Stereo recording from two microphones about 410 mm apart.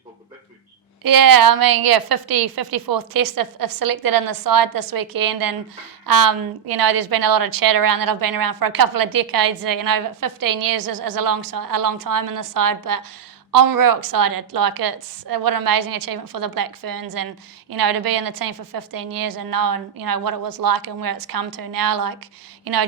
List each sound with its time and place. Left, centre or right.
1.0 s a woman's voice: right